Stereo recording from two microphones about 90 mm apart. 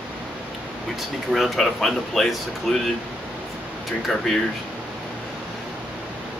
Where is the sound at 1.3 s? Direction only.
Centre (ahead or behind).